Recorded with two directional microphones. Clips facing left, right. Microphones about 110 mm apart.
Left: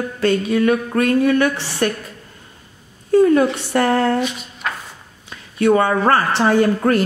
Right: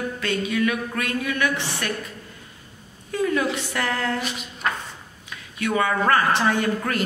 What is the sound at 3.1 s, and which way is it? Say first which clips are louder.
A woman's voice: left 10 dB; 40° left (ahead or behind).